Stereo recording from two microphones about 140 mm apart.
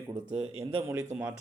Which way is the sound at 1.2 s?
10° right (ahead or behind).